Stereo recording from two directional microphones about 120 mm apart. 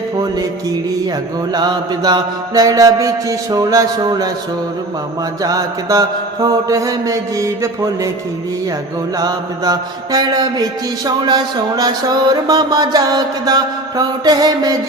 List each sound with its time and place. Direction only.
1.5 s mantra: 35° right (ahead or behind)
5.4 s mantra: 30° right (ahead or behind)
9.1 s mantra: 30° right (ahead or behind)